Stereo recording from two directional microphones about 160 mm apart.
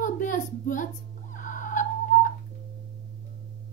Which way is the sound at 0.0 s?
55° left (ahead or behind).